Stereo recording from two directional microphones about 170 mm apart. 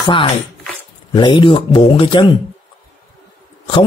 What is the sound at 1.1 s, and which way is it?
Speech, 25° left (ahead or behind).